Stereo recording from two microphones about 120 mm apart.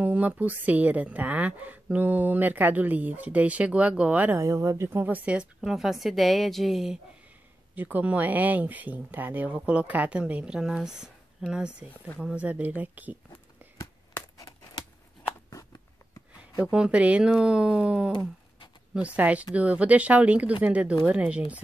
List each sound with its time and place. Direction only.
0.0 s a woman's voice: 10° right (ahead or behind)
4.4 s a woman's voice: 30° right (ahead or behind); by 7.0 s centre (ahead or behind)
7.7 s a woman's voice: 15° right (ahead or behind)
13.3 s a sound: 25° left (ahead or behind)
16.7 s a woman's voice: 10° right (ahead or behind)